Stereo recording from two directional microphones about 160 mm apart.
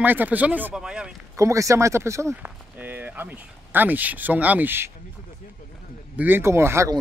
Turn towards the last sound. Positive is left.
turn(degrees=-15)  # may be behind; listen again after turning